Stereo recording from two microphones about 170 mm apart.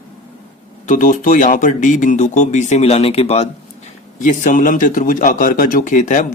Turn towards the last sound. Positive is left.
turn(degrees=45)  # may be behind; listen again after turning